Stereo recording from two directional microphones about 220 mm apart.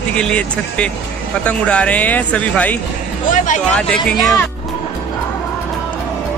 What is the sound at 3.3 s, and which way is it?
Speech, 35° left (ahead or behind).